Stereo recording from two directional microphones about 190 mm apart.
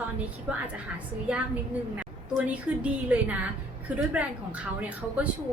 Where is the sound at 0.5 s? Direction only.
10° right (ahead or behind).